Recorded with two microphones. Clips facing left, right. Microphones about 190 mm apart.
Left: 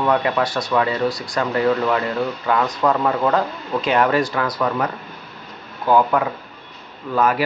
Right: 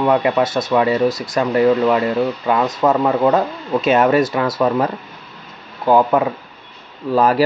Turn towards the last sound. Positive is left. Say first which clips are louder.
# right 4 dB
turn(degrees=-30)  # may be behind; listen again after turning